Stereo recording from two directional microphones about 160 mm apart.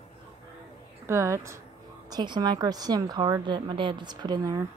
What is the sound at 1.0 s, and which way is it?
A woman's voice, 15° right (ahead or behind).